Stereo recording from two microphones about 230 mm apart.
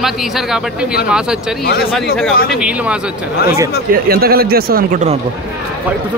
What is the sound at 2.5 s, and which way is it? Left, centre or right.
Speech, centre.